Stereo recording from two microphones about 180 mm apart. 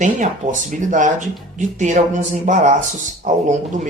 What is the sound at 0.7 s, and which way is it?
Speech, 45° right (ahead or behind).